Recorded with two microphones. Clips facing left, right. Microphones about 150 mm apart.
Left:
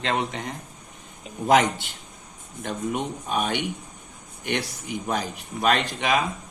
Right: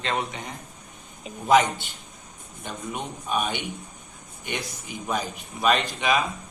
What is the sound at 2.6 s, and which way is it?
Speech, 90° left.